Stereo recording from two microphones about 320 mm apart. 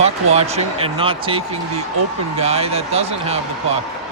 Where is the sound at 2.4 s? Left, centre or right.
Centre.